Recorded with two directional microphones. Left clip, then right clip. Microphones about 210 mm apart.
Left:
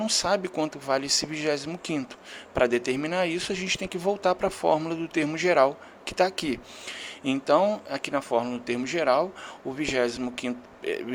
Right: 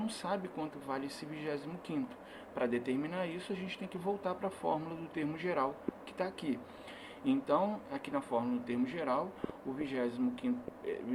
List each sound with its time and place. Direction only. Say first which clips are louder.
0.0 s speech: left 13 dB; 60° left (ahead or behind)